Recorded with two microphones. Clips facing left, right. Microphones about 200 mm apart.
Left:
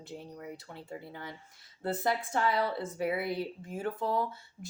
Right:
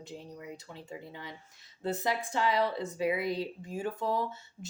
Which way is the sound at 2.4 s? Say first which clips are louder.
Right 3 dB; 15° right (ahead or behind).